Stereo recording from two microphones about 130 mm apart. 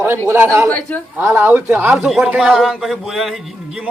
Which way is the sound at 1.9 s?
5° right (ahead or behind).